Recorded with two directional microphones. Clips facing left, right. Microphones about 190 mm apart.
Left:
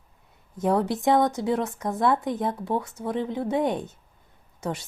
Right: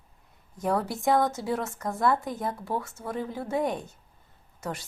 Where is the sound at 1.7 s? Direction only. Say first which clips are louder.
Left 2 dB; centre (ahead or behind).